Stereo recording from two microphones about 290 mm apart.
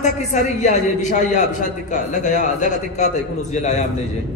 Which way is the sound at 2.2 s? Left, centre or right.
Left.